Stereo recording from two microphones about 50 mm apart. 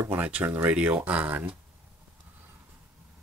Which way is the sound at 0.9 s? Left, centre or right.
Right.